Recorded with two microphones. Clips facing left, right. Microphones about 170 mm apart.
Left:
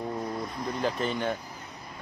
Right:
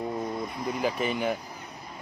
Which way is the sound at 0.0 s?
5° right (ahead or behind).